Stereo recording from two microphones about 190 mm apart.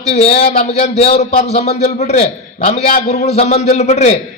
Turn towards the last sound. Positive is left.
turn(degrees=35)  # may be behind; listen again after turning